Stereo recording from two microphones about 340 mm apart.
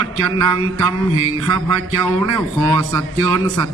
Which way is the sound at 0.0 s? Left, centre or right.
Right.